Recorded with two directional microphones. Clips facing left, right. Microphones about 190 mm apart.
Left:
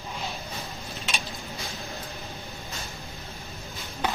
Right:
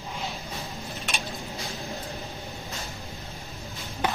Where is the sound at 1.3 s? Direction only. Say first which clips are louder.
Right 2 dB; centre (ahead or behind).